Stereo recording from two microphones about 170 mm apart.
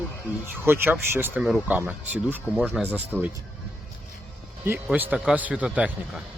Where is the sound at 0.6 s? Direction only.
10° right (ahead or behind).